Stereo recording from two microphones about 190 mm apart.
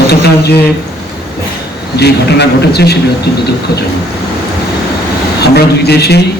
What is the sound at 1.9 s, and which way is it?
A man's voice, 60° left (ahead or behind).